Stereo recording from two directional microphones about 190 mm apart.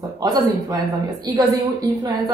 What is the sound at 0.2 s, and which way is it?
A woman's voice, 20° right (ahead or behind).